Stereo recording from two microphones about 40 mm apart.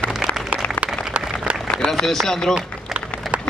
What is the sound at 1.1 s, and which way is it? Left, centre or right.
Applause, right.